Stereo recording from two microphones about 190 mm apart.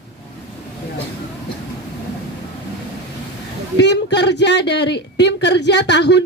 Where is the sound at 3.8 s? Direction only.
65° left (ahead or behind).